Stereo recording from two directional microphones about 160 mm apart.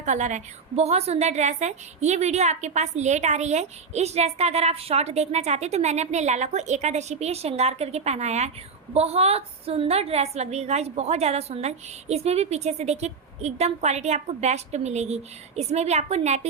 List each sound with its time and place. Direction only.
0.0 s a woman's voice: 50° right (ahead or behind)